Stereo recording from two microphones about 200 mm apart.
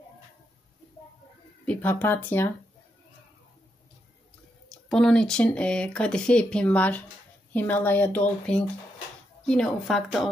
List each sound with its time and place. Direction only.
1.7 s speech: 10° left (ahead or behind)
4.6 s speech: 5° left (ahead or behind)